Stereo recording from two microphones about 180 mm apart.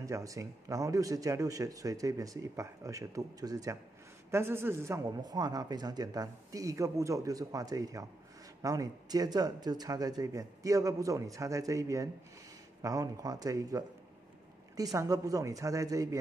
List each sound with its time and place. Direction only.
0.0 s speech: 20° right (ahead or behind)